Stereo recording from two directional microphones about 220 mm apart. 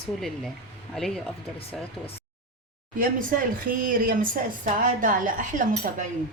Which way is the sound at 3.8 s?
40° right (ahead or behind).